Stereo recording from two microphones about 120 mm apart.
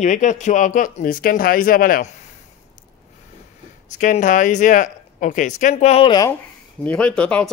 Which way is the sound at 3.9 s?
90° left.